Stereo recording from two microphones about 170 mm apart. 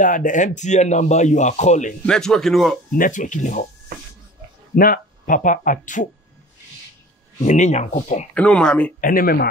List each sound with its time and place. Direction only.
0.0 s speech: 50° left (ahead or behind)
2.0 s speech: 5° left (ahead or behind)
3.0 s speech: 50° left (ahead or behind)
4.7 s speech: 55° left (ahead or behind)
7.4 s speech: 45° left (ahead or behind)
8.4 s speech: 5° left (ahead or behind)
9.0 s speech: 55° left (ahead or behind)